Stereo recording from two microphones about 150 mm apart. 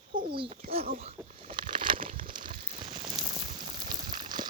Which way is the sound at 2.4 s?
65° right (ahead or behind).